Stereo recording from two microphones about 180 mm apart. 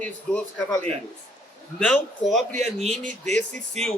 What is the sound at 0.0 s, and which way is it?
Speech, 5° left (ahead or behind).